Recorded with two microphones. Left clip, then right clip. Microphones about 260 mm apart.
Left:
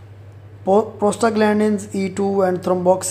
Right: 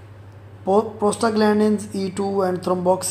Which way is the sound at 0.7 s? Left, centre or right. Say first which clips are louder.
Left 2 dB; centre.